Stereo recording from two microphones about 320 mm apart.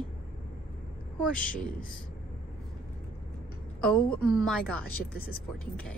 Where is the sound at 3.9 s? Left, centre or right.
Centre.